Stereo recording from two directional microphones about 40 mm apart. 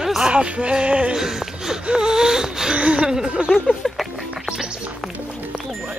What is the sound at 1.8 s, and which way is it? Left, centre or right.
Wheeze, centre.